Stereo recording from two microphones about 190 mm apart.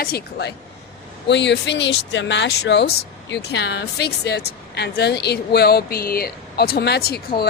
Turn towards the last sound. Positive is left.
turn(degrees=55)  # may be behind; listen again after turning